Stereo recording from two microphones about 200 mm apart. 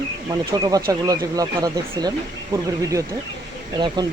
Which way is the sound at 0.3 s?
20° right (ahead or behind).